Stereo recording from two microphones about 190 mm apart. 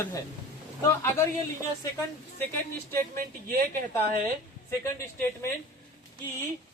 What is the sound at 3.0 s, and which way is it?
Speech, 50° right (ahead or behind).